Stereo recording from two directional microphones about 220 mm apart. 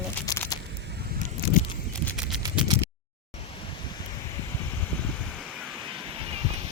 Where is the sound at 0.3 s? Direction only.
15° left (ahead or behind).